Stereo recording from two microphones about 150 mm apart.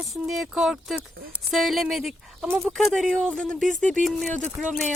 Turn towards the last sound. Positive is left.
turn(degrees=5)  # may be behind; listen again after turning